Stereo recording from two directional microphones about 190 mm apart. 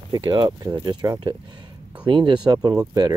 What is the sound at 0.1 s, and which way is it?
Speech, 25° right (ahead or behind).